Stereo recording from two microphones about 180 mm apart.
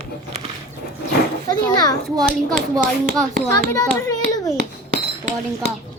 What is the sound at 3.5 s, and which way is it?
A child's voice, 20° left (ahead or behind).